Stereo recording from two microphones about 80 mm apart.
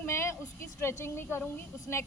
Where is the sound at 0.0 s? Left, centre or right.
Left.